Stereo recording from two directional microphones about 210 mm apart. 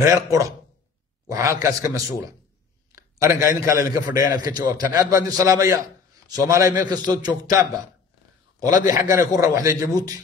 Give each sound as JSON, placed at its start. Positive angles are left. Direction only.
{"t": 0.0, "sound": "a man's voice", "side_deg": -15}
{"t": 8.8, "sound": "a man's voice", "side_deg": -15}